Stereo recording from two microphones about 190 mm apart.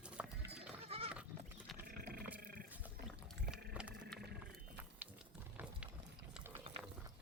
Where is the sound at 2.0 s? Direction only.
50° right (ahead or behind).